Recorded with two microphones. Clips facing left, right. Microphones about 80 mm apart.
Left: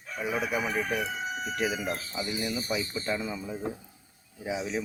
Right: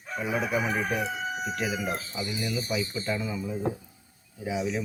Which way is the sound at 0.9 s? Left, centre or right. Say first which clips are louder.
Right 1 dB; centre.